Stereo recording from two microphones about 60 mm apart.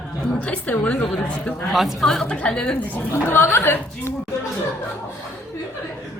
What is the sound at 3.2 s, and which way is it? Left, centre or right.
Speech, left.